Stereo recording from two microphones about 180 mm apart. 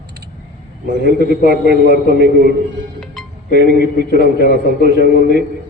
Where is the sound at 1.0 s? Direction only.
65° right (ahead or behind).